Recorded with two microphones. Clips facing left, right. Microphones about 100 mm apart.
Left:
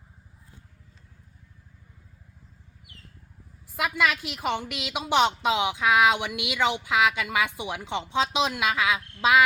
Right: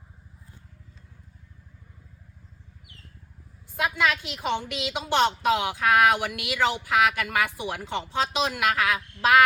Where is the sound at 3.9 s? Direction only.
5° left (ahead or behind).